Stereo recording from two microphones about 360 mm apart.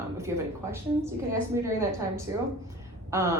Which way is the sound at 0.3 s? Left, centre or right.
Centre.